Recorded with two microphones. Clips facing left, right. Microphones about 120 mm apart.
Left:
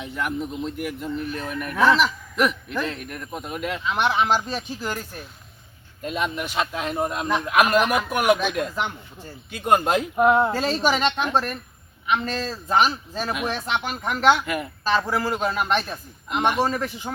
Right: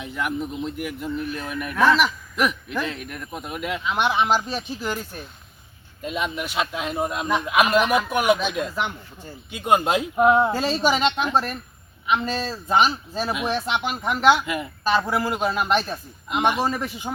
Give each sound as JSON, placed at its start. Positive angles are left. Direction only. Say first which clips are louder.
{"t": 0.0, "sound": "speech", "louder": "even", "side_deg": 0}
{"t": 14.8, "sound": "speech", "louder": "right 1 dB", "side_deg": -15}